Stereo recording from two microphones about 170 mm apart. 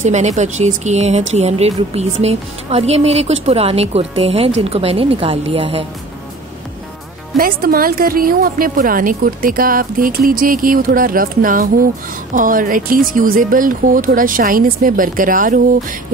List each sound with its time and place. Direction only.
0.0 s speech: 45° right (ahead or behind)
7.3 s a woman's voice: 60° right (ahead or behind)